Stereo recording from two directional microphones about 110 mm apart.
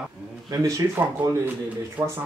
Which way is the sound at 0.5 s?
30° right (ahead or behind).